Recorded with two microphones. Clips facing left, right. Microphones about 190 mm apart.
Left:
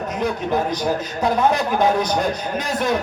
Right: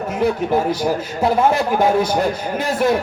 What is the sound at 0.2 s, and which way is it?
Speech, 10° right (ahead or behind).